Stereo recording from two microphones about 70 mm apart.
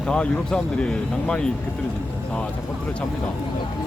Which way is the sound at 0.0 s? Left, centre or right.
Centre.